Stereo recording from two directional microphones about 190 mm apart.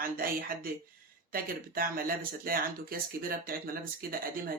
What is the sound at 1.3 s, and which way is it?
Speech, 50° right (ahead or behind).